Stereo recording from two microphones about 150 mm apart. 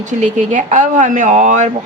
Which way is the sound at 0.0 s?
55° right (ahead or behind).